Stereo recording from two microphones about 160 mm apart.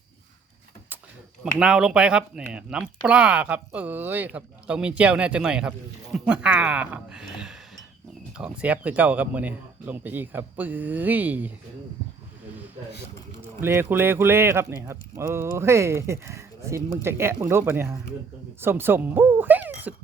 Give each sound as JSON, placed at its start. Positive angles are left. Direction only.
{"t": 1.5, "sound": "speech", "side_deg": -5}
{"t": 13.4, "sound": "speech", "side_deg": -15}